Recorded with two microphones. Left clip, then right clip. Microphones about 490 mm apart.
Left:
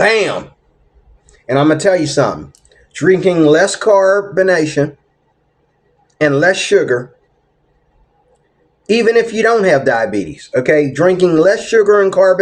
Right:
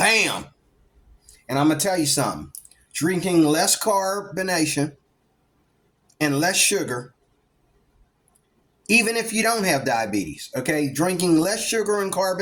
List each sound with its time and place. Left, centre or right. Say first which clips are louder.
1.5 s speech: left 10 dB; right
6.2 s speech: left 9 dB; right
9.0 s speech: left 10 dB; right